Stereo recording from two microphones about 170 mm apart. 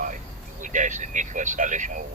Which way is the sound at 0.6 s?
45° right (ahead or behind).